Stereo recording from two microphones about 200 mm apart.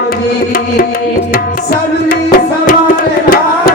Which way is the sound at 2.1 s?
45° left (ahead or behind).